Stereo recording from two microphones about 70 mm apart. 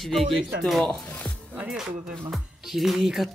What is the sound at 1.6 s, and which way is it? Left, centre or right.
Speech, centre.